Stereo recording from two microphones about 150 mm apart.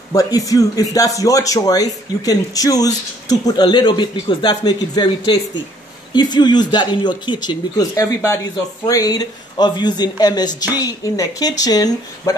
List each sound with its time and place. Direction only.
0.1 s speech: 25° left (ahead or behind)